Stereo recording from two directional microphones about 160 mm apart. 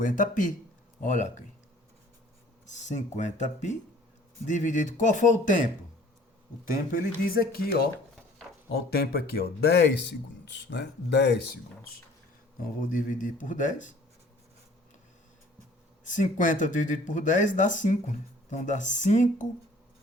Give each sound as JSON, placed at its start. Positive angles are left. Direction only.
{"t": 0.0, "sound": "speech", "side_deg": 55}
{"t": 2.6, "sound": "speech", "side_deg": 50}
{"t": 6.9, "sound": "speech", "side_deg": 60}
{"t": 12.9, "sound": "speech", "side_deg": 55}
{"t": 16.0, "sound": "speech", "side_deg": 55}